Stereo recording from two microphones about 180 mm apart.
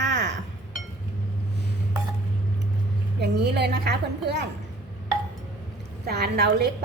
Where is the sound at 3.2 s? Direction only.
65° right (ahead or behind).